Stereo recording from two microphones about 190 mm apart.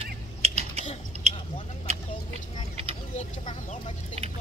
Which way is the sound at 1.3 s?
35° right (ahead or behind).